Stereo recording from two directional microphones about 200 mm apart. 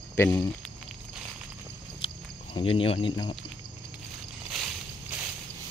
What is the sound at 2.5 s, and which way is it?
Speech, 30° left (ahead or behind).